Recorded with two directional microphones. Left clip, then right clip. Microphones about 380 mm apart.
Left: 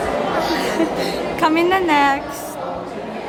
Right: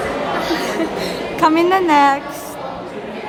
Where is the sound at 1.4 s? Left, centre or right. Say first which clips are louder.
Right 3 dB; centre.